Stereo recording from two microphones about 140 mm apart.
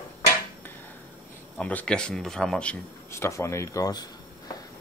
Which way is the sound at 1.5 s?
10° left (ahead or behind).